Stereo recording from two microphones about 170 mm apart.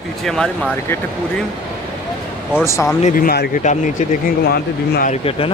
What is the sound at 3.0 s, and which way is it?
Speech, 55° left (ahead or behind).